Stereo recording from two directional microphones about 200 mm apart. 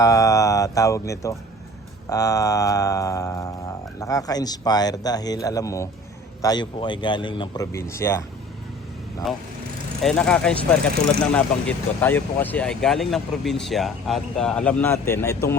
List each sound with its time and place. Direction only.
0.0 s speech: 15° left (ahead or behind)
9.2 s speech: centre (ahead or behind)